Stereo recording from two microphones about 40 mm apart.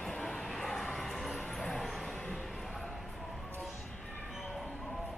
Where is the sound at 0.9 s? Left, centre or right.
Centre.